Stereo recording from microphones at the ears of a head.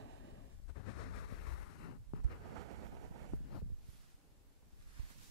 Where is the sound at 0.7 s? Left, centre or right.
Left.